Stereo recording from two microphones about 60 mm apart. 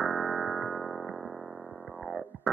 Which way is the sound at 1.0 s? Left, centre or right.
Centre.